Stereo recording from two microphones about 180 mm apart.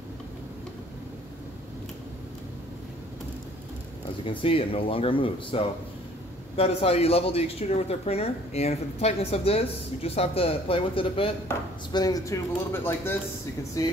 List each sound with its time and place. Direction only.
4.2 s speech: 30° left (ahead or behind)